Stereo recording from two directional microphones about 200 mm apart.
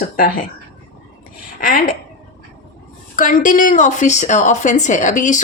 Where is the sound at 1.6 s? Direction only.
45° left (ahead or behind).